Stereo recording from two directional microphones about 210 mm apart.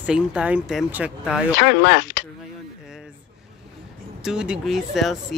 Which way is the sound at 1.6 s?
55° left (ahead or behind).